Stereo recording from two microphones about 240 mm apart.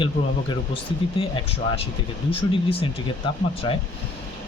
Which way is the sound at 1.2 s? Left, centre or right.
Left.